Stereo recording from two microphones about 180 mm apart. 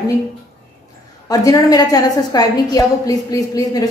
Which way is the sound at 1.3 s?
20° left (ahead or behind).